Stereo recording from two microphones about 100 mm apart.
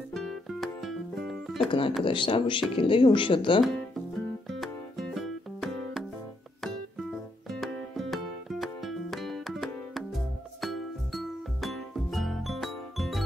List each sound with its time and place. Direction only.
0.1 s music: centre (ahead or behind)
1.7 s speech: 60° left (ahead or behind)
4.5 s music: centre (ahead or behind)